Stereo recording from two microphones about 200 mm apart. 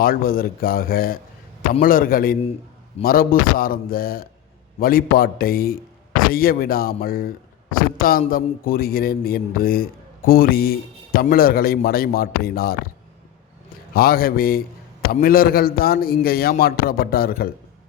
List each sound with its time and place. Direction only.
0.0 s a man's voice: 45° left (ahead or behind)
13.9 s a man's voice: 50° left (ahead or behind)